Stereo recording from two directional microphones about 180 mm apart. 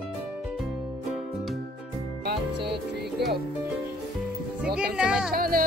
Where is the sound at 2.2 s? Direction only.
65° right (ahead or behind).